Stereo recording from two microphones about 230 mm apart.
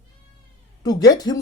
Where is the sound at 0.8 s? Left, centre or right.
Centre.